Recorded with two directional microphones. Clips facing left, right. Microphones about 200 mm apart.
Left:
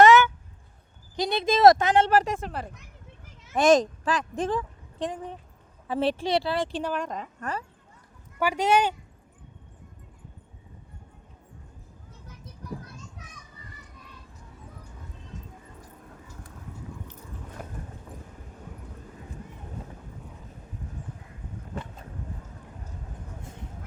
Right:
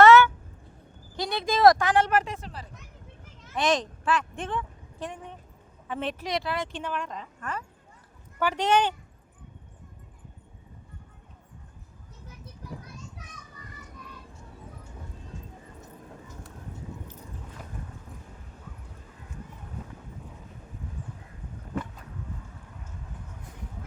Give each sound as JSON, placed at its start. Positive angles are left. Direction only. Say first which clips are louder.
{"t": 0.0, "sound": "a sound", "louder": "right 1 dB", "side_deg": 15}
{"t": 1.1, "sound": "a woman's voice", "louder": "left 3 dB", "side_deg": 20}
{"t": 2.3, "sound": "a woman's voice", "louder": "left 7 dB", "side_deg": 55}
{"t": 8.4, "sound": "speech", "louder": "left 1 dB", "side_deg": 10}